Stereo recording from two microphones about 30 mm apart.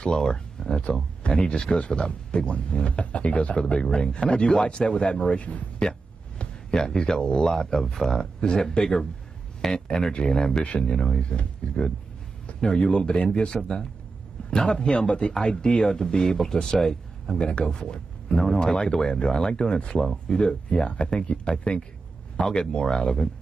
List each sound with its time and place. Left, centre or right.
0.0 s speech: left
5.4 s speech: left
6.7 s speech: left
10.7 s speech: left
17.3 s a man's voice: left